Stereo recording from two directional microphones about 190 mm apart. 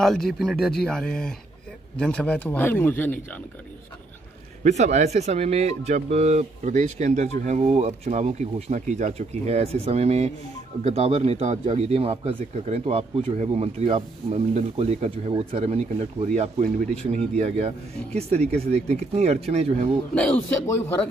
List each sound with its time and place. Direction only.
0.0 s a man's voice: centre (ahead or behind)
4.6 s speech: 35° right (ahead or behind)
20.2 s a man's voice: 5° left (ahead or behind)